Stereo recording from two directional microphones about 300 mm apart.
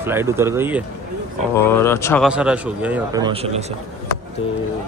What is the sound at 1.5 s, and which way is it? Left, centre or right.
Speech, centre.